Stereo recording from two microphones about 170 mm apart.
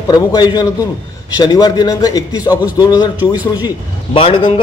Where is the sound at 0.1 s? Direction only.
25° left (ahead or behind).